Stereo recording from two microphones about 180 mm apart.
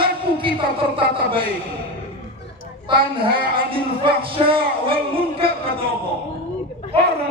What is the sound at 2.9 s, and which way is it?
Speech, 30° right (ahead or behind).